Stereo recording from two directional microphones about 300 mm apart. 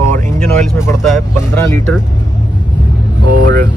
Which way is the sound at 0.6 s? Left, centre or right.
Centre.